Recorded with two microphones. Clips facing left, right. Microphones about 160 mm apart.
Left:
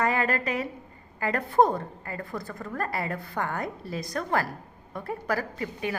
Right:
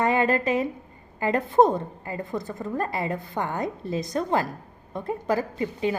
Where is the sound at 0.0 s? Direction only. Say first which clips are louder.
Right 4 dB; 20° right (ahead or behind).